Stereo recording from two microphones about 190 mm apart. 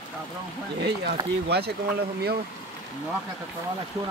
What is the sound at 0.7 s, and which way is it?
Speech, 65° right (ahead or behind).